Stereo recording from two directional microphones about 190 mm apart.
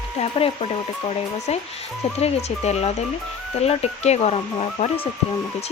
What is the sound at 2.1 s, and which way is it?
Speech, 35° left (ahead or behind).